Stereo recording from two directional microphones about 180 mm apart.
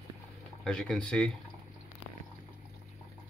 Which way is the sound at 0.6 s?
5° left (ahead or behind).